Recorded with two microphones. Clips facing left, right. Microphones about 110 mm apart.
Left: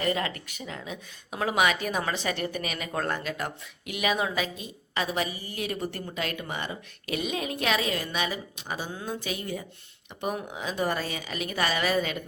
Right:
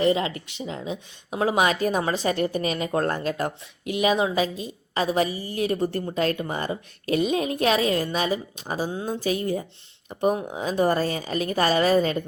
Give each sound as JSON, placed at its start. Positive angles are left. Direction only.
{"t": 0.0, "sound": "speech", "side_deg": -25}